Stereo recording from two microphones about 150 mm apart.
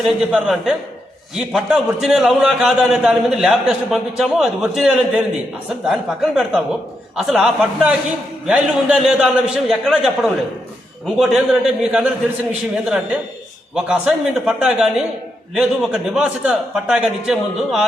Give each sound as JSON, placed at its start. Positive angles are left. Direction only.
{"t": 0.0, "sound": "a man's voice", "side_deg": -5}
{"t": 11.2, "sound": "a man's voice", "side_deg": -5}